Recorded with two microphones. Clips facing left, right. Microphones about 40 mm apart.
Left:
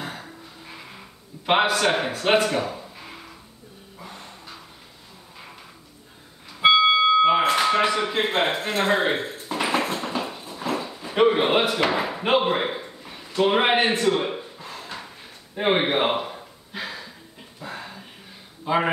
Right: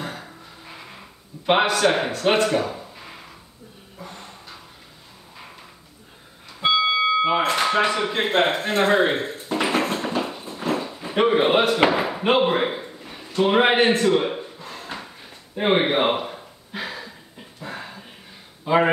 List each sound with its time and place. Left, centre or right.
0.0 s music: centre
1.4 s speech: centre
4.0 s a sound: centre
6.6 s music: centre
7.2 s speech: centre
9.2 s a sound: centre
11.1 s a man's voice: centre
11.9 s slam: centre
13.4 s a sound: centre
18.7 s a man's voice: centre